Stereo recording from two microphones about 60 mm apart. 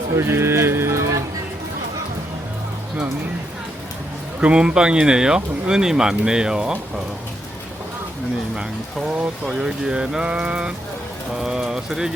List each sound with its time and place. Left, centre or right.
0.2 s speech: right
4.4 s speech: centre
9.5 s speech: centre